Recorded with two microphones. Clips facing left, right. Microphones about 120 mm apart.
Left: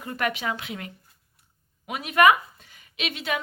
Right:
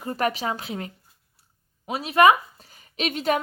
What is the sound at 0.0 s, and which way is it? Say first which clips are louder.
Speech: right 3 dB; 35° right (ahead or behind).